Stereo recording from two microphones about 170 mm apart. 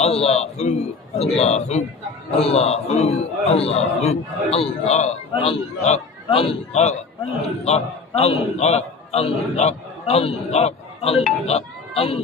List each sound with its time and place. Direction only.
0.0 s a man's voice: 35° left (ahead or behind)